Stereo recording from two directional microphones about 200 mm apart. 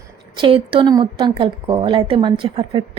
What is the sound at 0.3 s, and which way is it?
A woman's voice, 25° right (ahead or behind).